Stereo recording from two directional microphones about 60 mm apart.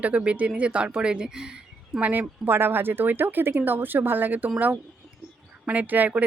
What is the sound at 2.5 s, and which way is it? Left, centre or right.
Speech, right.